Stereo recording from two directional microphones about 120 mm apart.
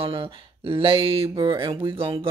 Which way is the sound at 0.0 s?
50° right (ahead or behind).